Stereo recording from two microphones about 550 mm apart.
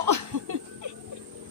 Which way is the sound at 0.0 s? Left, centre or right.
Right.